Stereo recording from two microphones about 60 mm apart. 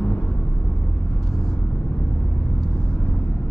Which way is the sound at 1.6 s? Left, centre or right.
Centre.